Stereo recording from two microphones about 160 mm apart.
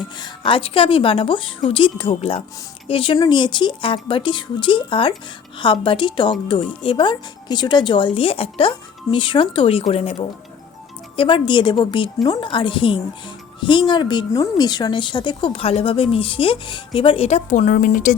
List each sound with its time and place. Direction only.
0.2 s a woman's voice: 35° left (ahead or behind); by 18.1 s 60° left (ahead or behind)